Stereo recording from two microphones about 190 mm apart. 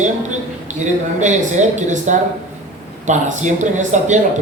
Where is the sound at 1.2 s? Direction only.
40° right (ahead or behind).